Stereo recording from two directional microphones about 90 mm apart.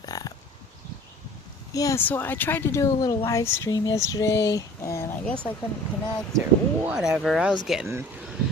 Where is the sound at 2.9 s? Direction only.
40° left (ahead or behind).